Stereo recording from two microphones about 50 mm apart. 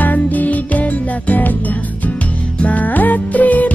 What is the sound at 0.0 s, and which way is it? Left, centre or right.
Music, left.